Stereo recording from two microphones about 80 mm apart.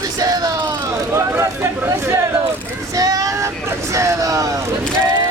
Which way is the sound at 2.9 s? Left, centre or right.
Right.